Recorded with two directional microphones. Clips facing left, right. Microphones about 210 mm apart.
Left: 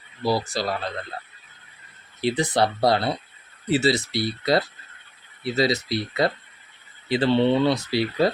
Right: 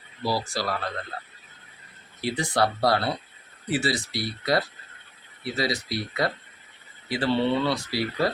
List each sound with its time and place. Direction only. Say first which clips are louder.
0.3 s speech: left 4 dB; 20° left (ahead or behind)
2.2 s speech: left 3 dB; 20° left (ahead or behind)